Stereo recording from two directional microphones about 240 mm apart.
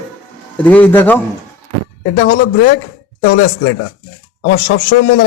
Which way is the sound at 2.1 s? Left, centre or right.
Left.